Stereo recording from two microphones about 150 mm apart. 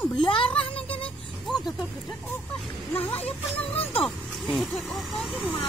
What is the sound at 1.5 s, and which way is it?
Speech, centre (ahead or behind).